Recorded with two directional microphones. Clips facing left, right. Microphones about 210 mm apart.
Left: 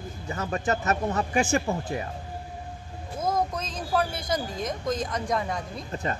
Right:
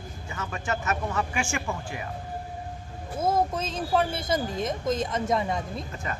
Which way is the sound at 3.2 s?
25° right (ahead or behind).